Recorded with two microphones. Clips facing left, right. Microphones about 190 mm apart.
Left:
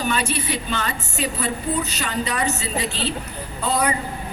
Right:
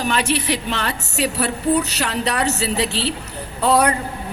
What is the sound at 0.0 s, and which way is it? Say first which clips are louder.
A man's voice: right 3 dB; 75° right (ahead or behind).